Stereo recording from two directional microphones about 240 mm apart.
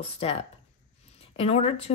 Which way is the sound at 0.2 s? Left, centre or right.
Left.